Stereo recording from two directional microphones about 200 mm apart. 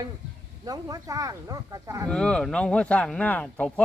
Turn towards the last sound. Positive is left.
turn(degrees=5)  # may be behind; listen again after turning